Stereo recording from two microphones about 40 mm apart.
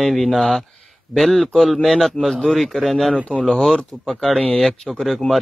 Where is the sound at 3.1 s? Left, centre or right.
Left.